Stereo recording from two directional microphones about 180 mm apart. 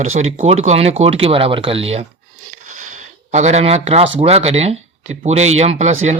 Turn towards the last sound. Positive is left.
turn(degrees=-40)  # may be behind; listen again after turning